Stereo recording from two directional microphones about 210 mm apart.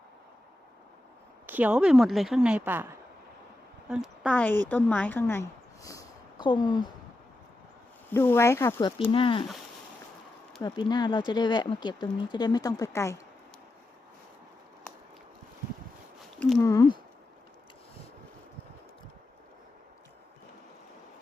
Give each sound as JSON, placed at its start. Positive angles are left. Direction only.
{"t": 1.5, "sound": "a woman's voice", "side_deg": -10}
{"t": 3.8, "sound": "a woman's voice", "side_deg": 0}
{"t": 8.1, "sound": "speech", "side_deg": 10}
{"t": 9.1, "sound": "speech", "side_deg": 25}
{"t": 10.6, "sound": "speech", "side_deg": 20}
{"t": 16.6, "sound": "speech", "side_deg": 15}